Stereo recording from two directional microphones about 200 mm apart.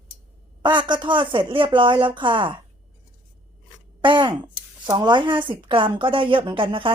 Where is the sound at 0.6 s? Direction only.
25° right (ahead or behind).